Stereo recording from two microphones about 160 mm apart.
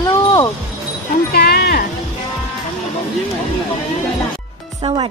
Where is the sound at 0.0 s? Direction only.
20° left (ahead or behind).